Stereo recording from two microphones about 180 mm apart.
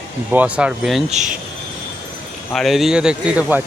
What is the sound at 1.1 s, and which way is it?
Speech, 40° right (ahead or behind).